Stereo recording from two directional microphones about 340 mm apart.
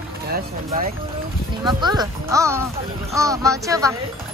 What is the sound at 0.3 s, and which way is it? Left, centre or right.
Speech, right.